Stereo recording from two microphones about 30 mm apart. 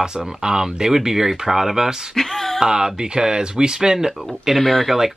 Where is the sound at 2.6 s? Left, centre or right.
Right.